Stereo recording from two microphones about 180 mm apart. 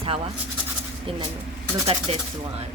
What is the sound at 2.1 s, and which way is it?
Speech, 35° right (ahead or behind).